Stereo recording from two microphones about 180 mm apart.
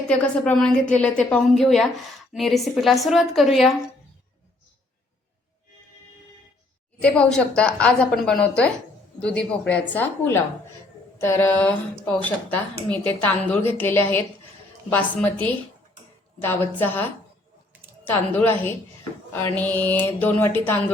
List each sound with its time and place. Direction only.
0.1 s a woman's voice: 5° left (ahead or behind)
7.0 s a woman's voice: 5° left (ahead or behind)